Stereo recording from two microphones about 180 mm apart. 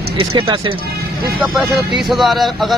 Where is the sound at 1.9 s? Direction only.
Centre (ahead or behind).